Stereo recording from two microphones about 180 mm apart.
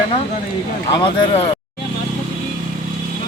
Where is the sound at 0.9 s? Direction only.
30° left (ahead or behind).